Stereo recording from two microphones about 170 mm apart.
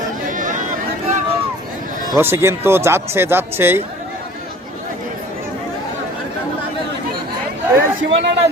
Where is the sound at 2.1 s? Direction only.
15° right (ahead or behind).